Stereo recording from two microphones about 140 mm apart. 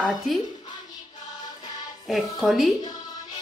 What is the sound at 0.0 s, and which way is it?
Speech, centre (ahead or behind).